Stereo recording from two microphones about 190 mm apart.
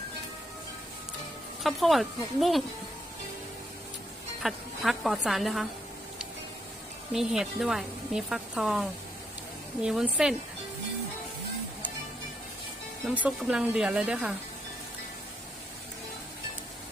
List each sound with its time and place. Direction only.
1.6 s speech: centre (ahead or behind)
4.4 s speech: centre (ahead or behind)
7.1 s speech: centre (ahead or behind)
13.1 s speech: 5° right (ahead or behind)